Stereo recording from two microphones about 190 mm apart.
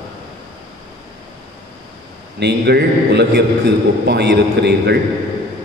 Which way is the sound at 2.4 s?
60° right (ahead or behind).